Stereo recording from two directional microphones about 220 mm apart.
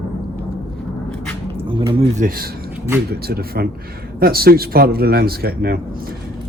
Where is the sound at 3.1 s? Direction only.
45° right (ahead or behind).